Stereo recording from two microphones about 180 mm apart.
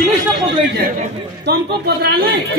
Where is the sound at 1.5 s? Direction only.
65° right (ahead or behind).